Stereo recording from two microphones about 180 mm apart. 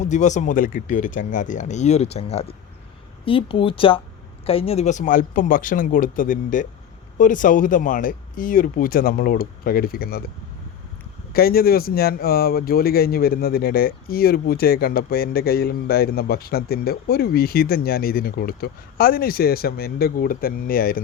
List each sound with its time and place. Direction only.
0.0 s speech: 40° left (ahead or behind); by 10.2 s 55° left (ahead or behind)
11.3 s speech: 55° left (ahead or behind)